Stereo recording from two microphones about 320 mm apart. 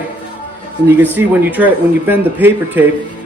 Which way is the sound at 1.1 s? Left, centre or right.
Centre.